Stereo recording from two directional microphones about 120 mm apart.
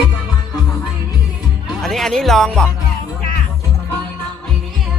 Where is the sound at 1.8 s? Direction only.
5° left (ahead or behind).